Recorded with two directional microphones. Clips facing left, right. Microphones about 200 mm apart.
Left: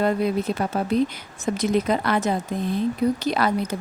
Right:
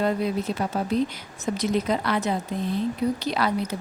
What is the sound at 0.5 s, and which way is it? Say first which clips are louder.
A woman's voice: left 2 dB; 55° left (ahead or behind).